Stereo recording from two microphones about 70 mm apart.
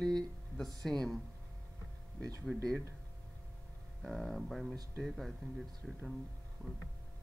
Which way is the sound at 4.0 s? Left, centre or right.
Centre.